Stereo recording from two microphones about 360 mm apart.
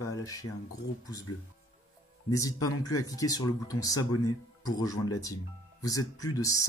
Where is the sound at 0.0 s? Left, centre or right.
Centre.